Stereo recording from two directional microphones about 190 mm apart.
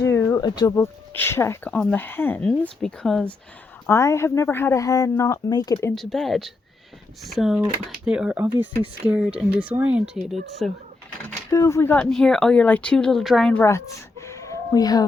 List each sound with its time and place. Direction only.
0.0 s a sound: 15° left (ahead or behind)
1.1 s speech: 10° left (ahead or behind)
3.8 s speech: 15° left (ahead or behind)
5.9 s speech: centre (ahead or behind)
11.5 s speech: 15° left (ahead or behind)